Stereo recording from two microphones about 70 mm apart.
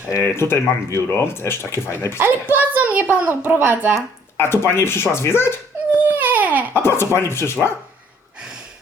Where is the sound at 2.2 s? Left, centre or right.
Right.